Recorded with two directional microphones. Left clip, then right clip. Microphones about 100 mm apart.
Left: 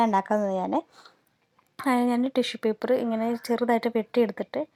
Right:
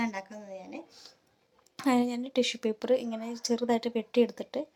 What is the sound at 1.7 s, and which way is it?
A woman's voice, 25° left (ahead or behind).